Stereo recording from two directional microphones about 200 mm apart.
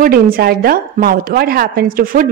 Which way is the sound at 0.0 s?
45° right (ahead or behind).